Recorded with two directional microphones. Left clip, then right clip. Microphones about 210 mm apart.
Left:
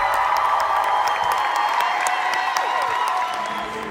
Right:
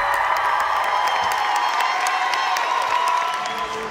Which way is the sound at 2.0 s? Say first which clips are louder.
Right 1 dB; 45° left (ahead or behind).